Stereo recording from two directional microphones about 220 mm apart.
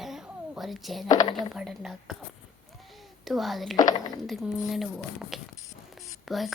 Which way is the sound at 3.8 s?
15° left (ahead or behind).